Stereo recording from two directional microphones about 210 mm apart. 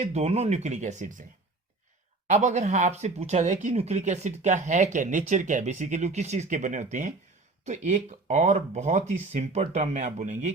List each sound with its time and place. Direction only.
0.0 s speech: 30° right (ahead or behind)
2.2 s speech: 35° right (ahead or behind)